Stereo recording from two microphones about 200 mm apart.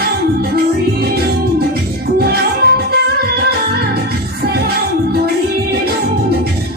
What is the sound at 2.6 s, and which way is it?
Music, 55° right (ahead or behind).